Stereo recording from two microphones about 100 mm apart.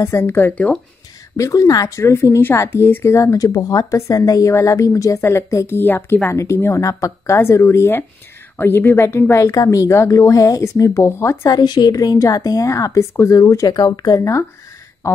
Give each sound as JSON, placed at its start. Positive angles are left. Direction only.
{"t": 0.0, "sound": "a woman's voice", "side_deg": 25}
{"t": 1.3, "sound": "a woman's voice", "side_deg": 35}
{"t": 11.5, "sound": "speech", "side_deg": 45}